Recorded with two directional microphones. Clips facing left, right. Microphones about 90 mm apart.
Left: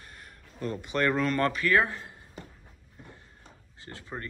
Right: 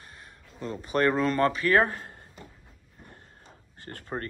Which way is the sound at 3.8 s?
55° right (ahead or behind).